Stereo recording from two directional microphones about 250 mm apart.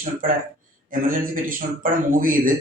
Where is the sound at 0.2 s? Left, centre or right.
Right.